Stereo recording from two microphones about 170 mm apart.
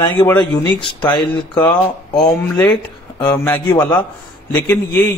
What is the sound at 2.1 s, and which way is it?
Speech, 25° left (ahead or behind).